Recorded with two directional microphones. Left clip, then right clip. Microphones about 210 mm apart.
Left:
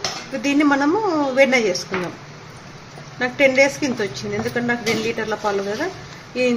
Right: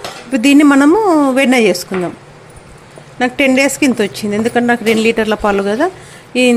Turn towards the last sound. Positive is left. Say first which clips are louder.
# right 8 dB
turn(degrees=-45)  # may be behind; listen again after turning